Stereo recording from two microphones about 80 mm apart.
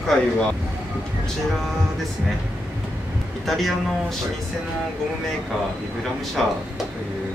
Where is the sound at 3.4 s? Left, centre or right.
Centre.